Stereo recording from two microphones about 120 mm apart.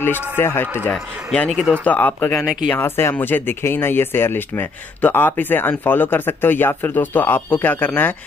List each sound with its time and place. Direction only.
0.4 s speech: 20° left (ahead or behind)
0.9 s speech: 5° left (ahead or behind)